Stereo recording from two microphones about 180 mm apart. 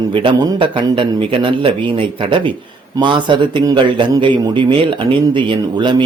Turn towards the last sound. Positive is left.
turn(degrees=-25)  # may be behind; listen again after turning